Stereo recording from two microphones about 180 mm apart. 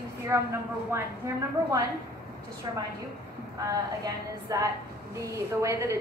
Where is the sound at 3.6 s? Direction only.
20° right (ahead or behind).